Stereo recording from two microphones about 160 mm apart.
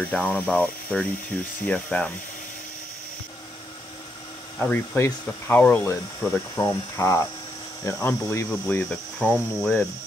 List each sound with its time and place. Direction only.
0.0 s speech: 10° left (ahead or behind)
4.6 s speech: 10° left (ahead or behind)